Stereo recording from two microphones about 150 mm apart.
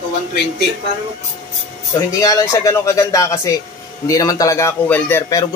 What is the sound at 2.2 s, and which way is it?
Speech, 20° left (ahead or behind).